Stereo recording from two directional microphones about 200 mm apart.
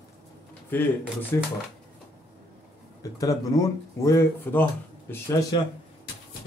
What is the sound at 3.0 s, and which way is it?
Speech, 15° left (ahead or behind).